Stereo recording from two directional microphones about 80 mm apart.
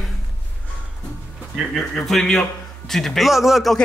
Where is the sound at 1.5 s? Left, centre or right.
Centre.